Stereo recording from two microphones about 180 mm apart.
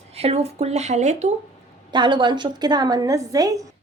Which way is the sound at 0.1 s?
35° right (ahead or behind).